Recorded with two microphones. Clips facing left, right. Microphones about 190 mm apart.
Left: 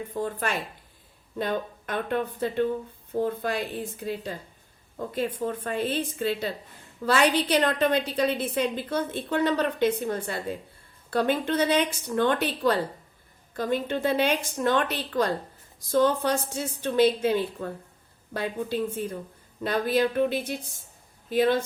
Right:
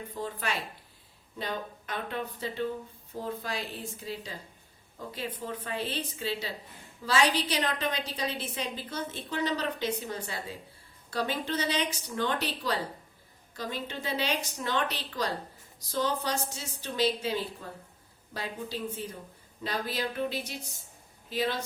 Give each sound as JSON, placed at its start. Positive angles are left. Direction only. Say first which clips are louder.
{"t": 0.1, "sound": "a woman's voice", "louder": "left 5 dB", "side_deg": 50}